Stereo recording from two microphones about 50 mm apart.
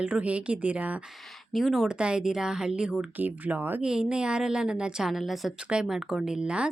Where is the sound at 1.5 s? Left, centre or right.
Centre.